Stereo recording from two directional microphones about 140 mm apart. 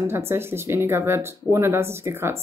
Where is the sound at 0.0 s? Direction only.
15° right (ahead or behind).